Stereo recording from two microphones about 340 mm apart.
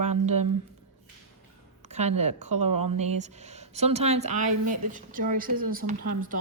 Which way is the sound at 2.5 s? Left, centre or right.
Right.